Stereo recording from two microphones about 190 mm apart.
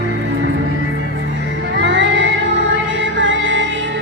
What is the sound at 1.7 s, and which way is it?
Music, 70° right (ahead or behind).